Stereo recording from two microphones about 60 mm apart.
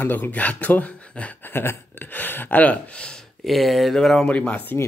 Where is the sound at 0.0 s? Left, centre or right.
Left.